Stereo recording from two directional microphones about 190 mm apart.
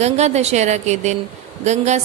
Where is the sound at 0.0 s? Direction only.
35° right (ahead or behind).